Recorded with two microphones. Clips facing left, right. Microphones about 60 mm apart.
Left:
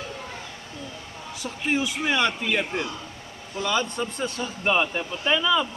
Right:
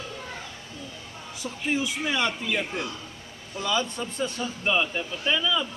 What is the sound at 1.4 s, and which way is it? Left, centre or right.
A man's voice, left.